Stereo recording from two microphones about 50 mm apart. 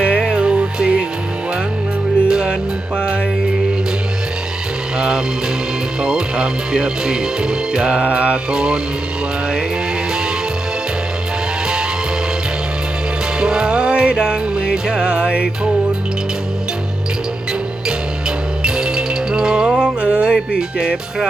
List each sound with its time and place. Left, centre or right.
0.0 s music: centre
2.2 s music: centre
4.9 s music: centre
6.0 s speech: centre
8.4 s speech: centre
13.4 s music: centre
18.6 s music: centre